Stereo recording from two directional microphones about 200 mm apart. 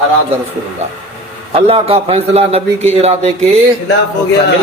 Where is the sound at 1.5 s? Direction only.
30° right (ahead or behind).